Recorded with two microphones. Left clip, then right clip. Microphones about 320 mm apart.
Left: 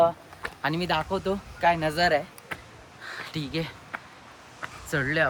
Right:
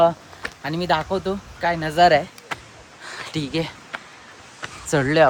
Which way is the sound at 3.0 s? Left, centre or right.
Centre.